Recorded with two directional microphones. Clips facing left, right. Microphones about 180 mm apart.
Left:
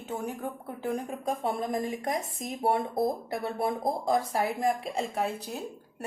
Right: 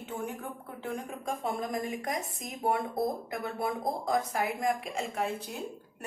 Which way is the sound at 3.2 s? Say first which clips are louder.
Left 3 dB; 30° left (ahead or behind).